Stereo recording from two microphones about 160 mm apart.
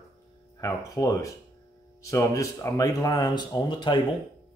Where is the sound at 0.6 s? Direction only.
20° left (ahead or behind).